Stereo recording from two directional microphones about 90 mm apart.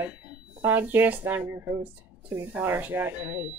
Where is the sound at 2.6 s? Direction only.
20° right (ahead or behind).